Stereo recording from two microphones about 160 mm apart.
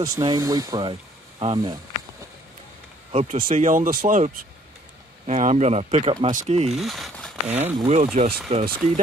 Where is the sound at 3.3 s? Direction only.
55° right (ahead or behind).